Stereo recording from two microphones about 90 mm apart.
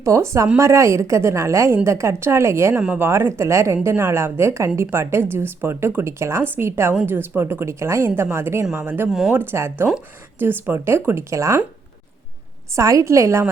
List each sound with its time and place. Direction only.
0.0 s a woman's voice: 35° right (ahead or behind)
2.7 s speech: 15° right (ahead or behind)
3.1 s a woman's voice: 30° right (ahead or behind)
9.0 s speech: 5° right (ahead or behind)
9.3 s a woman's voice: 25° right (ahead or behind)
12.7 s a woman's voice: 35° right (ahead or behind)